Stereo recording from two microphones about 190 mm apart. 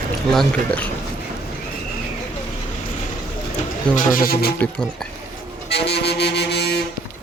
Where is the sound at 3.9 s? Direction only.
50° left (ahead or behind).